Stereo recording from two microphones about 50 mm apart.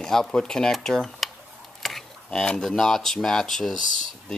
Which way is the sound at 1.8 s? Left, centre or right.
Centre.